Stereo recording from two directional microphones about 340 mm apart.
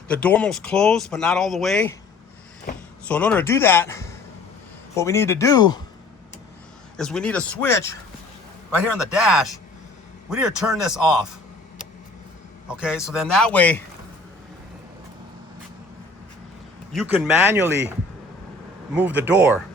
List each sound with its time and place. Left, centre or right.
0.1 s speech: centre
3.1 s speech: centre
6.9 s speech: centre
12.6 s a man's voice: centre
16.9 s speech: centre
18.9 s speech: centre